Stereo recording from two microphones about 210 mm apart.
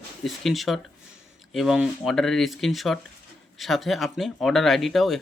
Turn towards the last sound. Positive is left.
turn(degrees=0)  # may be behind; listen again after turning